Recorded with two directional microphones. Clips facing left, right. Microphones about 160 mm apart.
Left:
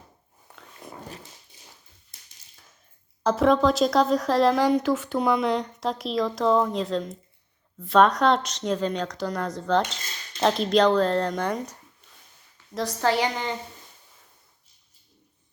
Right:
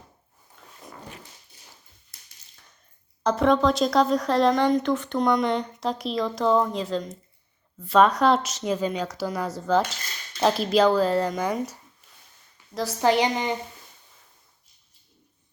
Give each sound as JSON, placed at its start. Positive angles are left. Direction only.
{"t": 0.5, "sound": "zipper", "side_deg": 70}
{"t": 3.2, "sound": "speech", "side_deg": 0}
{"t": 13.0, "sound": "a woman's voice", "side_deg": -20}